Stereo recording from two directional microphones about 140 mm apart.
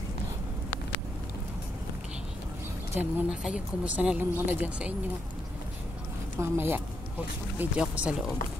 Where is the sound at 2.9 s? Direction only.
10° right (ahead or behind).